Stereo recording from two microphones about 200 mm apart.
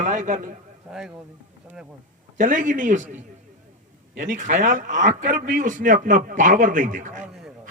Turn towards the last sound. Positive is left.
turn(degrees=-40)  # may be behind; listen again after turning